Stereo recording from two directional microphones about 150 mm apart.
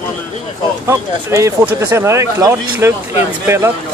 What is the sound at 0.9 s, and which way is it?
Speech, 20° right (ahead or behind).